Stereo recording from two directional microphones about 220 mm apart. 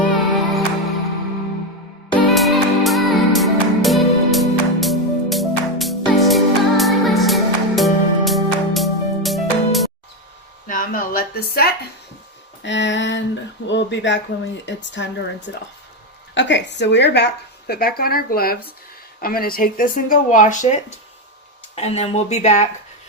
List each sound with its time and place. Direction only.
0.0 s music: centre (ahead or behind)
2.3 s music: centre (ahead or behind)
10.7 s a sound: 40° left (ahead or behind)
12.6 s speech: 55° left (ahead or behind); by 20.7 s 35° left (ahead or behind)
21.8 s speech: 30° left (ahead or behind)